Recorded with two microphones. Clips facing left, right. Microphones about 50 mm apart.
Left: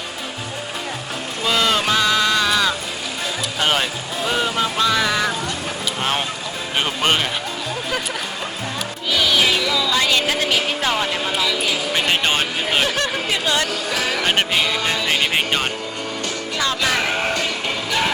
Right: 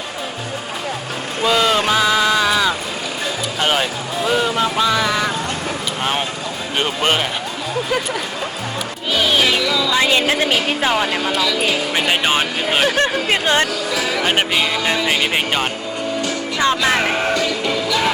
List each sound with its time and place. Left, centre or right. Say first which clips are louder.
1.5 s a sound: right 3 dB; centre
3.6 s speech: right 2 dB; centre
9.1 s music: right 1 dB; right
9.9 s a woman's voice: right 4 dB; right
11.2 s speech: right 2 dB; centre
11.9 s speech: right 1 dB; centre
12.9 s speech: right 4 dB; right
13.9 s speech: right 2 dB; left
15.3 s speech: right 1 dB; centre
16.6 s a woman's voice: right 4 dB; right
17.3 s music: right 4 dB; left